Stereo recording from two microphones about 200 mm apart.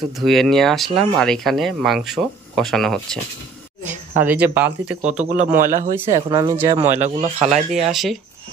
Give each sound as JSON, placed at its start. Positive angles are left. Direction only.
{"t": 0.2, "sound": "speech", "side_deg": 0}
{"t": 4.2, "sound": "speech", "side_deg": -10}
{"t": 5.6, "sound": "speech", "side_deg": -40}
{"t": 5.9, "sound": "speech", "side_deg": -15}
{"t": 6.9, "sound": "speech", "side_deg": -35}
{"t": 7.7, "sound": "speech", "side_deg": 0}